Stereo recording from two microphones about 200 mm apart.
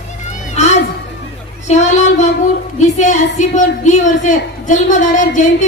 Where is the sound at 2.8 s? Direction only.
35° left (ahead or behind).